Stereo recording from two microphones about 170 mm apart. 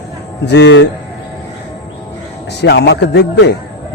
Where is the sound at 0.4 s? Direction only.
85° left.